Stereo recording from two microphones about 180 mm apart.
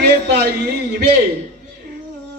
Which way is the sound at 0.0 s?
65° right (ahead or behind).